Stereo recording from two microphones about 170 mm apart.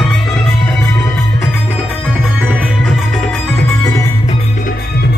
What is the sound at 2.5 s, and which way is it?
Music, 5° right (ahead or behind).